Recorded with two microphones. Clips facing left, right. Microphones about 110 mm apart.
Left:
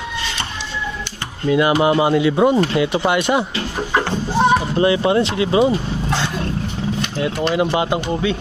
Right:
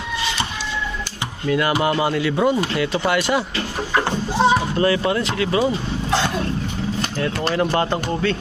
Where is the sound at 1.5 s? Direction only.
20° left (ahead or behind).